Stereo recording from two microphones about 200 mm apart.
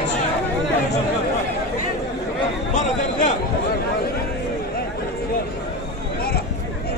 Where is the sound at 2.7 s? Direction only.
35° left (ahead or behind).